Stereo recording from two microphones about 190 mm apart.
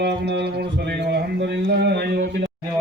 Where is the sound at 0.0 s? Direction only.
60° right (ahead or behind).